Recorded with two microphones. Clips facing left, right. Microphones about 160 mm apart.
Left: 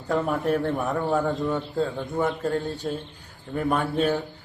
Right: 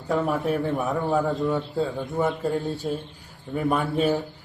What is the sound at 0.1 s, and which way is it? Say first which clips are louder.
A man's voice: even; centre (ahead or behind).